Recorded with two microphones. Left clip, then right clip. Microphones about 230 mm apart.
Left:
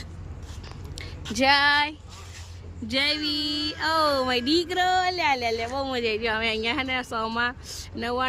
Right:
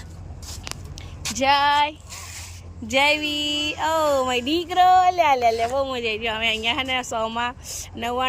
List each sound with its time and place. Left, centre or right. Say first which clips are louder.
1.4 s female singing: right 2 dB; centre
2.9 s a woman's voice: right 5 dB; centre